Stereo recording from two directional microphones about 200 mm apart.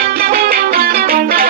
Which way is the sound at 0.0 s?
50° right (ahead or behind).